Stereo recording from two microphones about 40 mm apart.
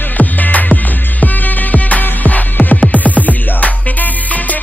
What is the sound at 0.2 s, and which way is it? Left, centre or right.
Music, left.